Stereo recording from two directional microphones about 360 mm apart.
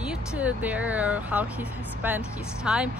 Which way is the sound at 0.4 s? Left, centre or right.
Centre.